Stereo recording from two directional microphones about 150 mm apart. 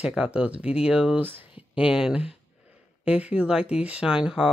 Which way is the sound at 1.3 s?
35° left (ahead or behind).